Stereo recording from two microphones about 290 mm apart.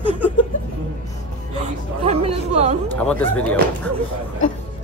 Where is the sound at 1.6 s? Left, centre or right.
Right.